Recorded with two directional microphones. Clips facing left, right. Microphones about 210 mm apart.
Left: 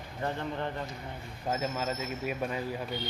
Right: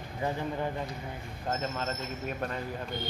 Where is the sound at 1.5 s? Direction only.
10° left (ahead or behind).